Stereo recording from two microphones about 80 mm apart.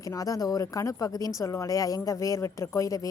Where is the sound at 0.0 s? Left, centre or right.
Left.